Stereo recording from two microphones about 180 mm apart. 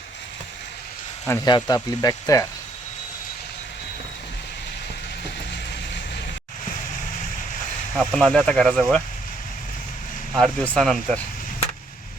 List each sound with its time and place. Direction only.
1.5 s speech: 25° left (ahead or behind)
7.9 s speech: 5° left (ahead or behind)
10.3 s speech: 5° left (ahead or behind)